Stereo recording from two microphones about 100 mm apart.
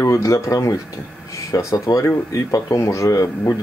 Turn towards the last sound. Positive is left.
turn(degrees=35)  # may be behind; listen again after turning